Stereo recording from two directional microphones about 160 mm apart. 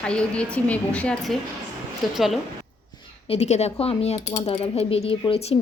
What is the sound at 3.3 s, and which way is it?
Speech, 40° left (ahead or behind).